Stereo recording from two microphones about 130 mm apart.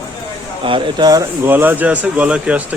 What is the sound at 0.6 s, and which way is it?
Speech, 35° right (ahead or behind).